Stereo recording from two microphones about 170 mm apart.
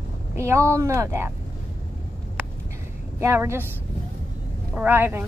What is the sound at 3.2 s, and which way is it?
Speech, 15° right (ahead or behind).